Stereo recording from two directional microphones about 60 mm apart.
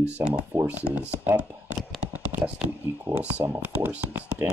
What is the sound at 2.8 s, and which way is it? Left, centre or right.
Speech, right.